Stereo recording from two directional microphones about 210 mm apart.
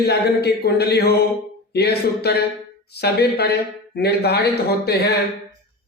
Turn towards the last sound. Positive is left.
turn(degrees=50)  # may be behind; listen again after turning